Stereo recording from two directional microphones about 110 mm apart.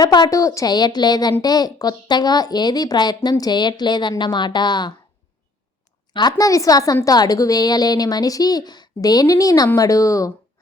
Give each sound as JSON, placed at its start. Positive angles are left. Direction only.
{"t": 0.0, "sound": "a woman's voice", "side_deg": 35}
{"t": 6.3, "sound": "a woman's voice", "side_deg": 30}